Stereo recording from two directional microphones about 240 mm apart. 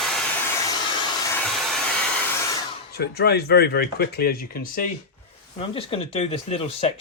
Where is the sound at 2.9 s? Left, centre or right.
Left.